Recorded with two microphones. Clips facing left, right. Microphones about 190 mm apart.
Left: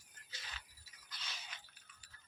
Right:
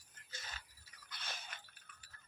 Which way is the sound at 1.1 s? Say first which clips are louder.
Right 3 dB; 55° right (ahead or behind).